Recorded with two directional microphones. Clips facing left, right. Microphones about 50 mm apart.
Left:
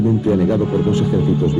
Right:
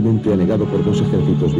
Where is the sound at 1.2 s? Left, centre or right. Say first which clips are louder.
Even; right.